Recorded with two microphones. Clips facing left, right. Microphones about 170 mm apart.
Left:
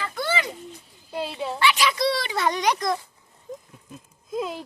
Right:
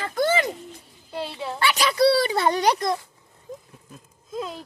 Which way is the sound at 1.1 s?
15° left (ahead or behind).